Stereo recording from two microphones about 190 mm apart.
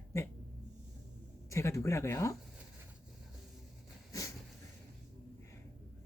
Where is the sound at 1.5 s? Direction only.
15° left (ahead or behind).